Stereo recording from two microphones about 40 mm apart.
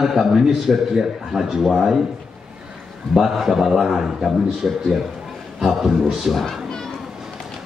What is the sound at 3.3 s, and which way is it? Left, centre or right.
A man's voice, centre.